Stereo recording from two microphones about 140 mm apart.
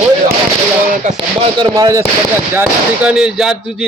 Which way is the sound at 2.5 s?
15° right (ahead or behind).